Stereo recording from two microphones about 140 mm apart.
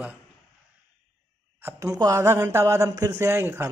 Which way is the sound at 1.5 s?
20° right (ahead or behind).